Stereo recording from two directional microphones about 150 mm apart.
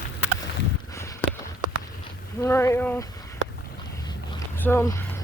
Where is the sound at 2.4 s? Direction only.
20° left (ahead or behind).